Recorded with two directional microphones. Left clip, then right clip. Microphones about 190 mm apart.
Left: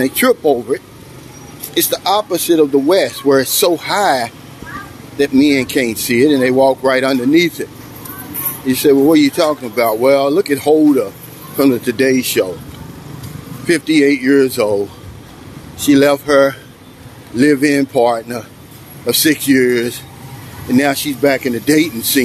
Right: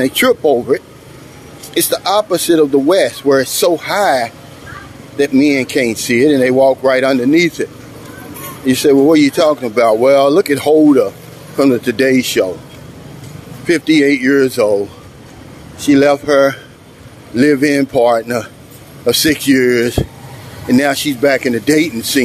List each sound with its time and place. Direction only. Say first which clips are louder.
0.0 s speech: right 1 dB; 25° right (ahead or behind)
3.0 s speech: right 1 dB; 5° right (ahead or behind)
5.1 s speech: right 1 dB; 20° right (ahead or behind)
5.4 s speech: even; 10° right (ahead or behind)
8.6 s speech: right 1 dB; 25° right (ahead or behind)
13.7 s speech: right 1 dB; 20° right (ahead or behind)